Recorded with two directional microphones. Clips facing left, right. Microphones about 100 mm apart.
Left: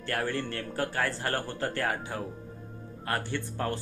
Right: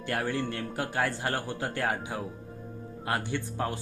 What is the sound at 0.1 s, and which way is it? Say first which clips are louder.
Speech: right 1 dB; 15° right (ahead or behind).